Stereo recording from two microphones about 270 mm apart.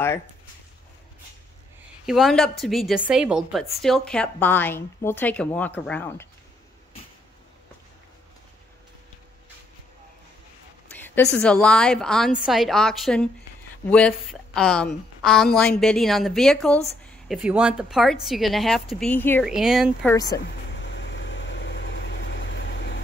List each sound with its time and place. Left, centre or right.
2.0 s a woman's voice: centre
10.9 s a sound: centre
11.3 s a woman's voice: centre
20.3 s vehicle: left